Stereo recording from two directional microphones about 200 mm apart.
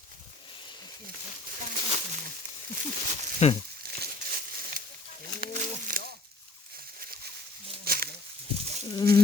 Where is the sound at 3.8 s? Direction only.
50° right (ahead or behind).